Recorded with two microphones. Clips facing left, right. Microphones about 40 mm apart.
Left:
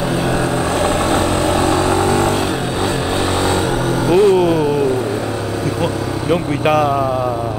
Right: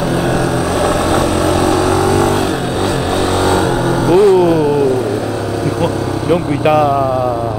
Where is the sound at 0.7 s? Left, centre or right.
Left.